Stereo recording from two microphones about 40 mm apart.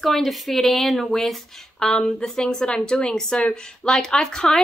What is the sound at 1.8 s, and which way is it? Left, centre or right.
Speech, centre.